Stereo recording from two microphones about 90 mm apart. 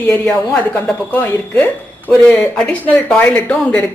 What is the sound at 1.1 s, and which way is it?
A woman's voice, 25° left (ahead or behind).